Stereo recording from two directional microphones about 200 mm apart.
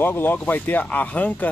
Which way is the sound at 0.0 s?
10° left (ahead or behind).